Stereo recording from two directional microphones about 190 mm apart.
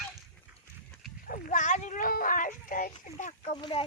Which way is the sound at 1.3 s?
40° left (ahead or behind).